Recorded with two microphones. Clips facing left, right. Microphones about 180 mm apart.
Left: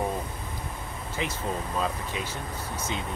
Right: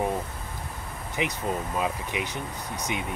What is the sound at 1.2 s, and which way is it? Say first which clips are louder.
Speech: right 3 dB; 15° right (ahead or behind).